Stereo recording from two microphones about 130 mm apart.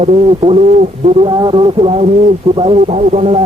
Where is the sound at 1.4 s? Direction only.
40° right (ahead or behind).